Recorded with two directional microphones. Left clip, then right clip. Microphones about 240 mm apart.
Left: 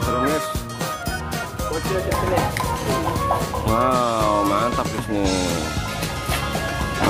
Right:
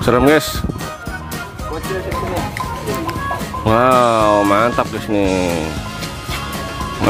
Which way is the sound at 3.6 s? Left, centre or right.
Right.